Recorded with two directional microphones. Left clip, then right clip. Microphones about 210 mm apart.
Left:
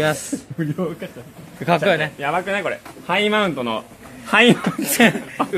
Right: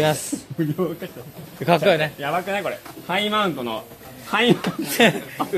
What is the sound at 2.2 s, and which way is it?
Speech, 45° left (ahead or behind).